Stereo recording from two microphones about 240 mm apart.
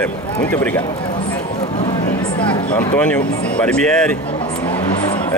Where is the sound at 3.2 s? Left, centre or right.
Left.